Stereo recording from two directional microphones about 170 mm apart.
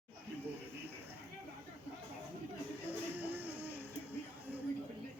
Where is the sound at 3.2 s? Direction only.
10° right (ahead or behind).